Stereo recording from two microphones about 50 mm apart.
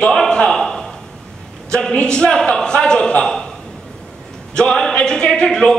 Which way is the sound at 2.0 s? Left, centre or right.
Centre.